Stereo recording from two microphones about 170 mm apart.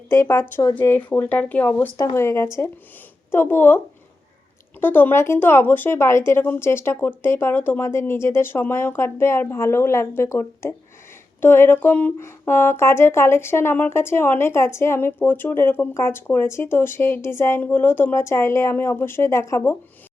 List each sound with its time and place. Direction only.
0.1 s speech: 15° left (ahead or behind)
4.8 s speech: 10° left (ahead or behind)